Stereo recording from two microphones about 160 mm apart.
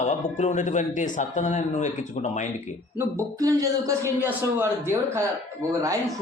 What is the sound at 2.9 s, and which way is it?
Speech, 20° right (ahead or behind).